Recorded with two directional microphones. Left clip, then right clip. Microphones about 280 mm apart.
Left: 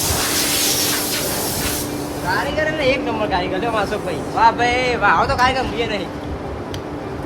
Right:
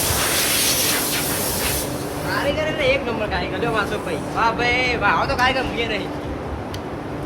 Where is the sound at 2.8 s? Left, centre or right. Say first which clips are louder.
Left 1 dB; left.